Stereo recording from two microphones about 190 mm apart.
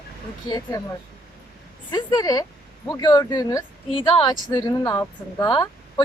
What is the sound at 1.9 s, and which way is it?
Speech, 20° left (ahead or behind).